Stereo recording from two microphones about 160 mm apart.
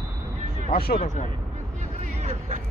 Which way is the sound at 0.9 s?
50° left (ahead or behind).